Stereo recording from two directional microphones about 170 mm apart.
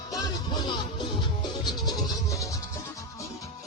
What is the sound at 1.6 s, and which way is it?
Music, 25° left (ahead or behind).